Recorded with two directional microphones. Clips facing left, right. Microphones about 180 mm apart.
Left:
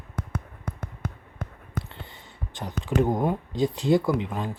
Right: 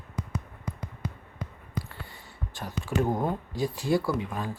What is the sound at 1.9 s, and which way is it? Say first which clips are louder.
Speech: left 1 dB; 20° left (ahead or behind).